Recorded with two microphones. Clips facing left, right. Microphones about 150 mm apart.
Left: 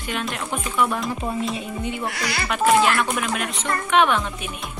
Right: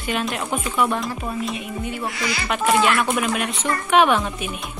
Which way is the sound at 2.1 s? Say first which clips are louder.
Right 1 dB; 70° left (ahead or behind).